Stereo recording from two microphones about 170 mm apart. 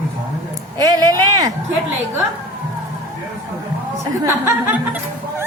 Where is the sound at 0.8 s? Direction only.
20° right (ahead or behind).